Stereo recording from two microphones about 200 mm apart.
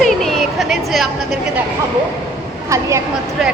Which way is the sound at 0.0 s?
Centre (ahead or behind).